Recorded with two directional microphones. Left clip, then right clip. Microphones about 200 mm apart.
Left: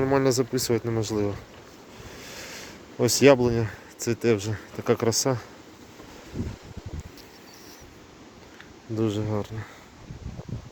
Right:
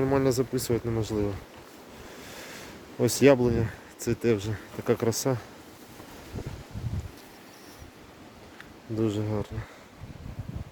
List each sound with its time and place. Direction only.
0.0 s speech: 10° left (ahead or behind)
9.0 s speech: 5° left (ahead or behind)